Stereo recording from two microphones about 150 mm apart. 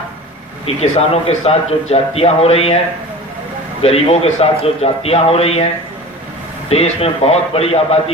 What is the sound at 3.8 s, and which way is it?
A man's voice, 40° left (ahead or behind).